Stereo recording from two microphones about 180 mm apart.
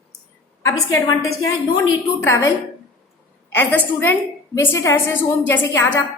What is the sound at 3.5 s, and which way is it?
A woman's voice, 10° left (ahead or behind).